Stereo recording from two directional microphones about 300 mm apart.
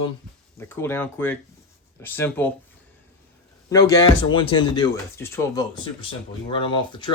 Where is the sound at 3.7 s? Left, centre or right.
Centre.